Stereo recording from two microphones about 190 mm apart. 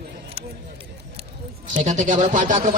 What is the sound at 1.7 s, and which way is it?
A man's voice, 40° right (ahead or behind).